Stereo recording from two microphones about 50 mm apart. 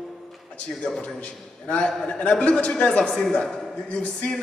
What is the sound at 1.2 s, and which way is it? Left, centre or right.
A man's voice, left.